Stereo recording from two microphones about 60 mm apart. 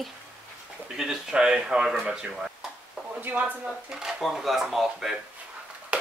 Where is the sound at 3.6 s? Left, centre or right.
Centre.